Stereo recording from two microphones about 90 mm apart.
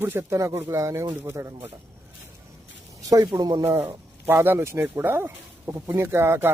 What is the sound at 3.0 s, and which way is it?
Speech, 40° right (ahead or behind).